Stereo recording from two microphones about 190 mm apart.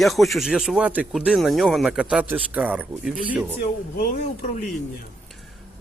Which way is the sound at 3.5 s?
55° left (ahead or behind).